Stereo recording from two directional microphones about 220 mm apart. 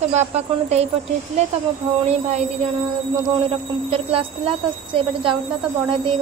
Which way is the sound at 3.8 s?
25° right (ahead or behind).